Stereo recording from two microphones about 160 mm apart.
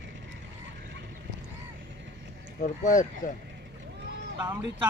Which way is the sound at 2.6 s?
55° left (ahead or behind).